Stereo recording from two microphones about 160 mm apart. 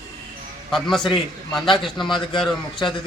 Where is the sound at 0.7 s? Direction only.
Centre (ahead or behind).